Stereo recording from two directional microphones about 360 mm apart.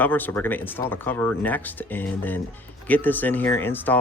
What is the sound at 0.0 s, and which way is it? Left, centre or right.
Speech, centre.